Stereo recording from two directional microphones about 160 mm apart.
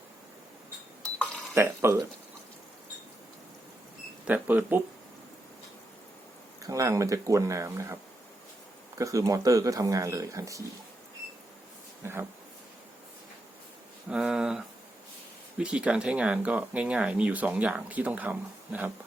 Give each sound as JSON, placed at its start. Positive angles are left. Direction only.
{"t": 1.5, "sound": "speech", "side_deg": -15}
{"t": 4.3, "sound": "speech", "side_deg": -10}
{"t": 6.6, "sound": "speech", "side_deg": -20}
{"t": 9.0, "sound": "speech", "side_deg": -20}
{"t": 12.0, "sound": "speech", "side_deg": -15}
{"t": 14.1, "sound": "speech", "side_deg": -5}